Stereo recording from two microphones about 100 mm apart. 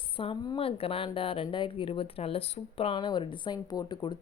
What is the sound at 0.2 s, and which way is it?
Speech, 60° left (ahead or behind).